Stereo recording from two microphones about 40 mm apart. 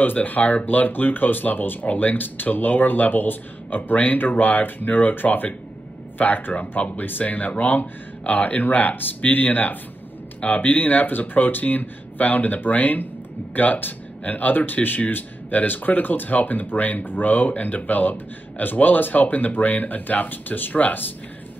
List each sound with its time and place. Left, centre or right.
0.0 s speech: left